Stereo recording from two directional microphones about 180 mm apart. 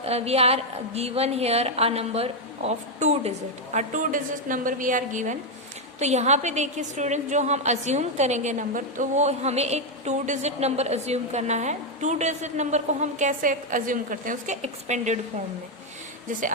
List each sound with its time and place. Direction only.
0.0 s a woman's voice: 35° right (ahead or behind)